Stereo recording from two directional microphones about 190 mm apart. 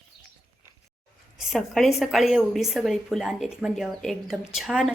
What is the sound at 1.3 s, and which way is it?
A woman's voice, centre (ahead or behind).